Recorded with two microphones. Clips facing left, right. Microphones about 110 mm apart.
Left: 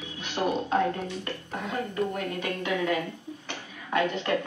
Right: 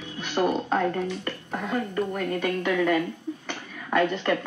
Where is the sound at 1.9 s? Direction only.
50° right (ahead or behind).